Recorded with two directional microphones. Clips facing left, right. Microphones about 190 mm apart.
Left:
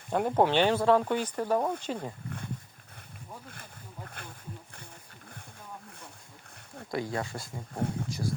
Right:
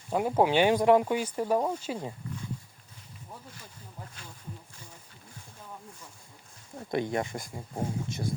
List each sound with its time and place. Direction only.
0.1 s speech: 5° right (ahead or behind)
4.2 s speech: 60° left (ahead or behind)
6.7 s speech: 20° right (ahead or behind)